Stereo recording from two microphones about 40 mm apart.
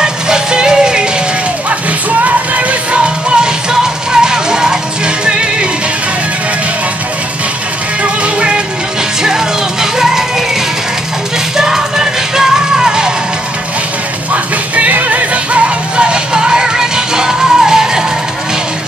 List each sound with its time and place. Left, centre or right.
0.0 s music: centre
2.2 s music: right
8.0 s music: right
9.2 s music: centre
11.5 s music: centre
14.3 s music: right; by 18.0 s centre